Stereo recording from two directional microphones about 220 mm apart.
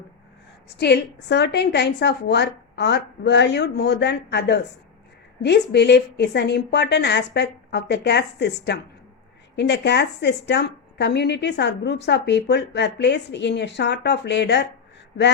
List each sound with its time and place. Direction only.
0.8 s a woman's voice: 50° left (ahead or behind)